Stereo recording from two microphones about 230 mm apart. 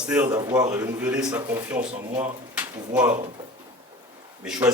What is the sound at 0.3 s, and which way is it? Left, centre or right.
A man's voice, centre.